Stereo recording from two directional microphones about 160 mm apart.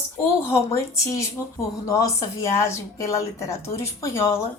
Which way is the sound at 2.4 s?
20° left (ahead or behind).